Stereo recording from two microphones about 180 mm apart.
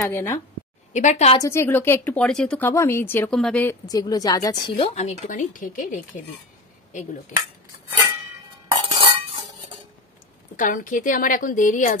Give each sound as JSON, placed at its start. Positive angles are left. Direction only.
{"t": 0.0, "sound": "speech", "side_deg": 15}
{"t": 0.9, "sound": "a woman's voice", "side_deg": 40}
{"t": 1.4, "sound": "a woman's voice", "side_deg": 15}
{"t": 3.8, "sound": "a woman's voice", "side_deg": 20}
{"t": 4.7, "sound": "a woman's voice", "side_deg": 35}
{"t": 8.8, "sound": "cutlery", "side_deg": -30}
{"t": 10.5, "sound": "a woman's voice", "side_deg": 50}